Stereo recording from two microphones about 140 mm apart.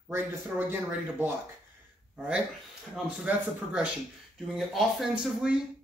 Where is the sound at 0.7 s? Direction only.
15° right (ahead or behind).